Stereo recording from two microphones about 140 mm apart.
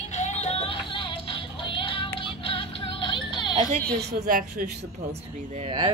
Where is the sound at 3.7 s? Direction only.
10° left (ahead or behind).